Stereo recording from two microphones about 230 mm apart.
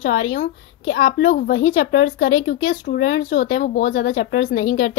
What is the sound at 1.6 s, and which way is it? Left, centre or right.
A woman's voice, left.